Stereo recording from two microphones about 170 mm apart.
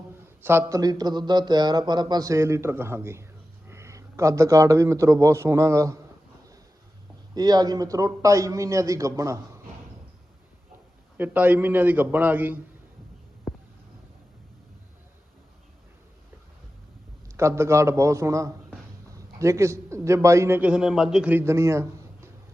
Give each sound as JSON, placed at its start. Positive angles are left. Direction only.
{"t": 0.4, "sound": "a man's voice", "side_deg": -15}
{"t": 7.3, "sound": "speech", "side_deg": -25}
{"t": 11.2, "sound": "a man's voice", "side_deg": -10}
{"t": 13.5, "sound": "a sound", "side_deg": 0}
{"t": 17.3, "sound": "a man's voice", "side_deg": -15}